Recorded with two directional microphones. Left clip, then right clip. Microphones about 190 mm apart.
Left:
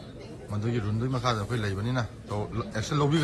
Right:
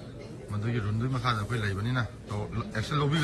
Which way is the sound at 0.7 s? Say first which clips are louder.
Left 3 dB; 20° left (ahead or behind).